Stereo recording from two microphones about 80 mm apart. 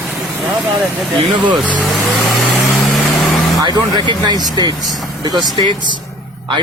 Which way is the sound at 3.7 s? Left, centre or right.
Right.